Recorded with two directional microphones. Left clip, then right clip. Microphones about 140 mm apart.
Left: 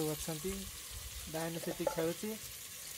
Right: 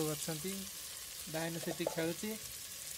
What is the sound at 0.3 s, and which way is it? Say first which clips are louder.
Speech: even; 5° left (ahead or behind).